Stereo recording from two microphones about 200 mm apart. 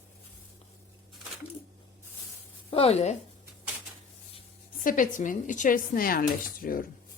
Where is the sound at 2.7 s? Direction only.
30° left (ahead or behind).